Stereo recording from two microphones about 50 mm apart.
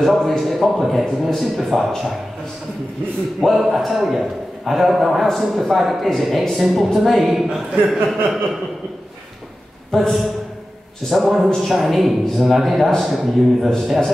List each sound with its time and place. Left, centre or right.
0.0 s a man's voice: centre
3.5 s a man's voice: centre
11.1 s a man's voice: centre